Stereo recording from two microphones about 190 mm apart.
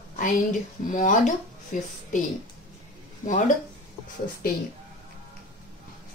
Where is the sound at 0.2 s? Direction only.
45° left (ahead or behind).